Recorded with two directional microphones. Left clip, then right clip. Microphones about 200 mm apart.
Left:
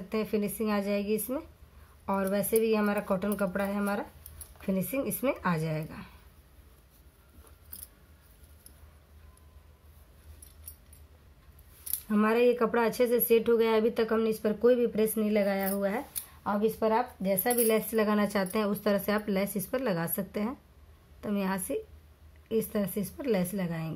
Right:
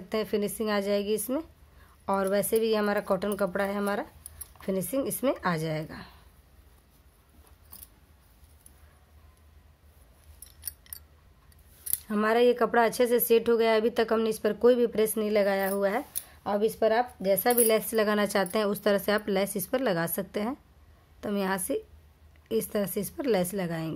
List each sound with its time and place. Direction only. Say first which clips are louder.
0.1 s speech: right 2 dB; 35° right (ahead or behind)
12.1 s speech: right 2 dB; 30° right (ahead or behind)